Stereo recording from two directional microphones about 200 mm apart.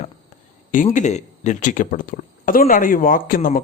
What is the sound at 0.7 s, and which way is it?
Speech, 40° left (ahead or behind).